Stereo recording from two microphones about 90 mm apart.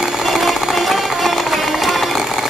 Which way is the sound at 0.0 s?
5° right (ahead or behind).